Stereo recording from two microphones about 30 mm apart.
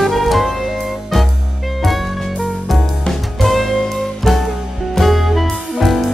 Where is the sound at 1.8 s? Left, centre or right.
Centre.